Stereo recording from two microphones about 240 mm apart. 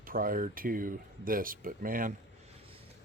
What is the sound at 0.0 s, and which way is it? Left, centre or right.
Speech, right.